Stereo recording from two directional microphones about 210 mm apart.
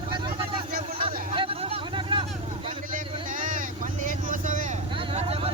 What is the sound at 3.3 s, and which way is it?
Vehicle, 40° right (ahead or behind).